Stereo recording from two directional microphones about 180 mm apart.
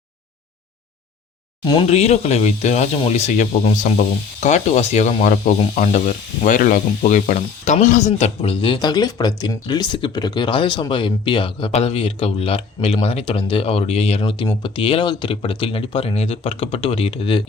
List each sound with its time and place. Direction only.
1.9 s speech: 35° left (ahead or behind)